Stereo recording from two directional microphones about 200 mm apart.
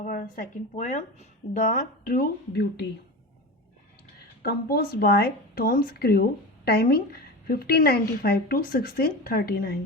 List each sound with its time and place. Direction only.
0.0 s a woman's voice: 45° left (ahead or behind)
4.4 s a woman's voice: 50° left (ahead or behind)